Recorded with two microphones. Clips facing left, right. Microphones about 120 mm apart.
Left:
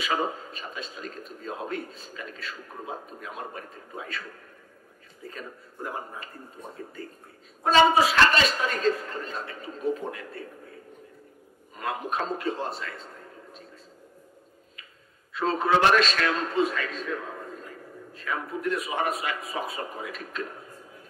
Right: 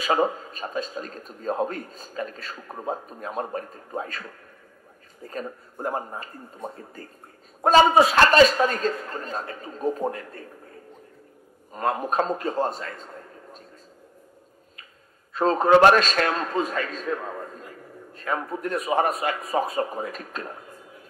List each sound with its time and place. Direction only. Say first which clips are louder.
0.0 s a man's voice: right 5 dB; 40° right (ahead or behind)
5.2 s a man's voice: right 6 dB; 40° right (ahead or behind)
11.7 s a man's voice: right 6 dB; 40° right (ahead or behind)
15.3 s a man's voice: right 6 dB; 40° right (ahead or behind)